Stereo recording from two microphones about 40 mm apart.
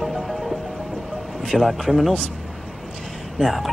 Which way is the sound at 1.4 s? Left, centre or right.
Centre.